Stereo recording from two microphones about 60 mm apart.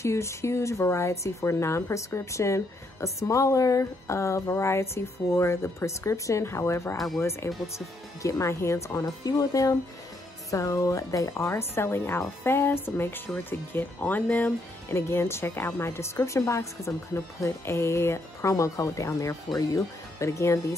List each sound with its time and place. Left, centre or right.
0.0 s a woman's voice: left
7.5 s speech: centre
8.2 s speech: left
14.2 s speech: centre
14.9 s a woman's voice: left